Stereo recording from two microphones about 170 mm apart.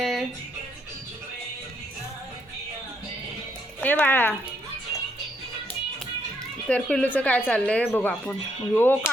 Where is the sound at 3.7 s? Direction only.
10° left (ahead or behind).